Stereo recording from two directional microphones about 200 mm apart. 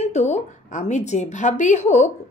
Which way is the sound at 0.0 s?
35° left (ahead or behind).